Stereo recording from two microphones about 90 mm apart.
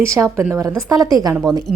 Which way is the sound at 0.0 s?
35° right (ahead or behind).